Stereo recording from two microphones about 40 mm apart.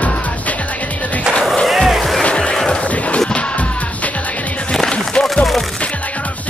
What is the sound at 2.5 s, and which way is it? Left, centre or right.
Music, centre.